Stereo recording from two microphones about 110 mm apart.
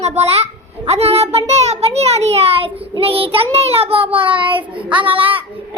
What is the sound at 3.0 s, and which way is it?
Child singing, 60° right (ahead or behind).